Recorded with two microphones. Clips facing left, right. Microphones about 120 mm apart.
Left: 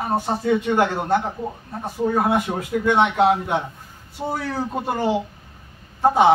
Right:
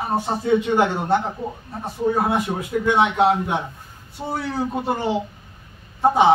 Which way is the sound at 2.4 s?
Centre (ahead or behind).